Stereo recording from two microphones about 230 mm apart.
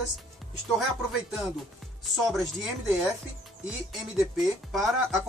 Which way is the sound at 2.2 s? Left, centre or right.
Centre.